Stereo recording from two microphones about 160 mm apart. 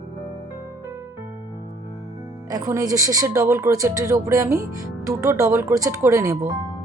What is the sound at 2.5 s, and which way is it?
Speech, 20° right (ahead or behind).